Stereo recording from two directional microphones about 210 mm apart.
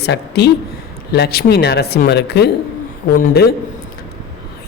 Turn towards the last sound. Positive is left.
turn(degrees=50)  # may be behind; listen again after turning